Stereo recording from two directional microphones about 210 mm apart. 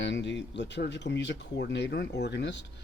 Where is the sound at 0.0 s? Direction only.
60° left (ahead or behind).